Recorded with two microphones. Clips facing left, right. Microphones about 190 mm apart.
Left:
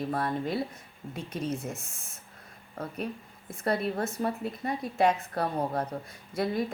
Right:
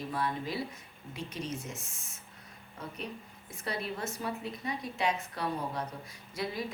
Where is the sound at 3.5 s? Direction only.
55° left (ahead or behind).